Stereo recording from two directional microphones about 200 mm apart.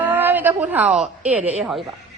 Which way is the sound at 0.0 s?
10° right (ahead or behind).